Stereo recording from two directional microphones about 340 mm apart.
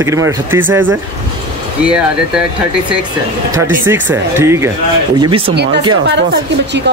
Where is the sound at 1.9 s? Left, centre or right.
Centre.